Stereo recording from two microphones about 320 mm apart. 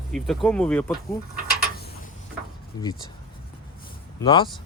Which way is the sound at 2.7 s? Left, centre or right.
Centre.